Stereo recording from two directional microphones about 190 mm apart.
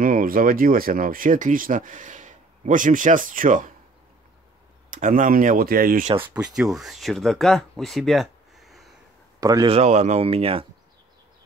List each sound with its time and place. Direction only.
0.0 s speech: 45° right (ahead or behind)
4.9 s speech: 45° right (ahead or behind)
6.2 s speech: 5° right (ahead or behind)
9.4 s speech: 20° right (ahead or behind)
9.8 s speech: 35° right (ahead or behind)